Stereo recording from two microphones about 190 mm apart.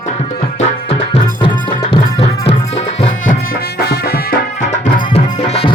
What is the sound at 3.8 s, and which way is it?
Music, 55° left (ahead or behind).